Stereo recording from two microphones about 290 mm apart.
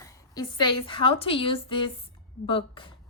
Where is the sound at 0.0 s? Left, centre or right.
Centre.